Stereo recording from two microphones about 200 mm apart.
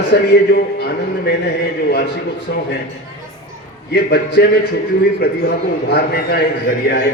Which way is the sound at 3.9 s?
55° left (ahead or behind).